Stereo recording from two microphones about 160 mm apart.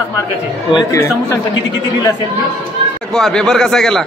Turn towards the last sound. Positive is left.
turn(degrees=5)  # may be behind; listen again after turning